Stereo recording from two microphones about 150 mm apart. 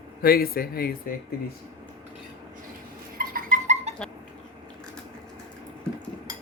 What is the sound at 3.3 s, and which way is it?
Dog, 55° right (ahead or behind).